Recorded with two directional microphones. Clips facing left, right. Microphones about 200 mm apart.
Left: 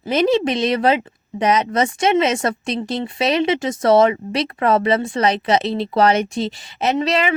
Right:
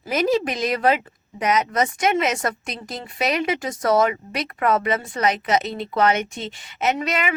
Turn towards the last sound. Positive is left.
turn(degrees=30)  # may be behind; listen again after turning